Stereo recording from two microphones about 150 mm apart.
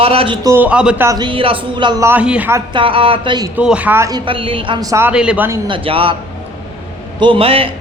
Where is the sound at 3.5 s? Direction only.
5° right (ahead or behind).